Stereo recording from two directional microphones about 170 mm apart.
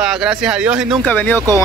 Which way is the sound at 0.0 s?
5° right (ahead or behind).